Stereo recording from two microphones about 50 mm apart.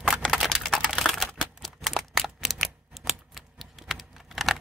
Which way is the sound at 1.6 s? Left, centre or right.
Centre.